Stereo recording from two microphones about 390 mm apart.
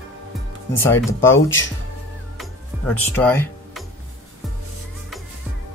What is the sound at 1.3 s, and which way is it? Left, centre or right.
Speech, left.